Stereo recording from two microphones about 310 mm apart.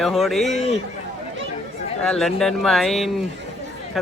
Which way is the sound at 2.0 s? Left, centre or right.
Centre.